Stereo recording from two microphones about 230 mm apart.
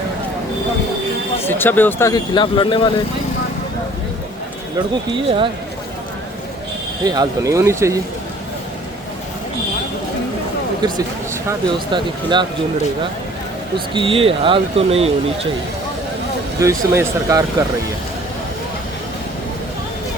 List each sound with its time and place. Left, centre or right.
1.5 s speech: centre
5.1 s speech: right
7.0 s speech: centre
10.8 s speech: centre
13.7 s speech: right
16.6 s speech: centre